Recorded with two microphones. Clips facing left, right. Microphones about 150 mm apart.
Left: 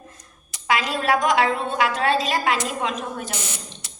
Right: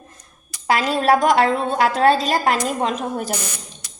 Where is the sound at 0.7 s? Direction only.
40° right (ahead or behind).